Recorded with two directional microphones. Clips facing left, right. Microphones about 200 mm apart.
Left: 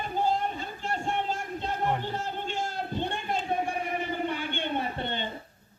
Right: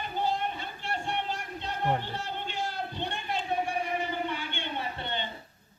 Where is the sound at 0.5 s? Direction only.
40° left (ahead or behind).